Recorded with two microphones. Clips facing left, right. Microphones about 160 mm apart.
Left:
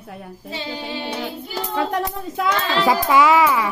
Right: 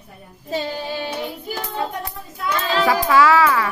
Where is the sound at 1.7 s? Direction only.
90° left.